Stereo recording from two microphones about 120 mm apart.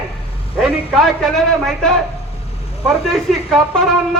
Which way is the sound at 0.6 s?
Centre (ahead or behind).